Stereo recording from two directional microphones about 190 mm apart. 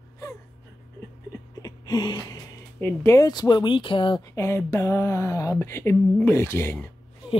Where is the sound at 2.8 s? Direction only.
10° left (ahead or behind).